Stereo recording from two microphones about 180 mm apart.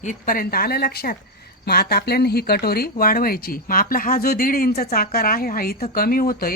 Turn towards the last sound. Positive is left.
turn(degrees=55)  # may be behind; listen again after turning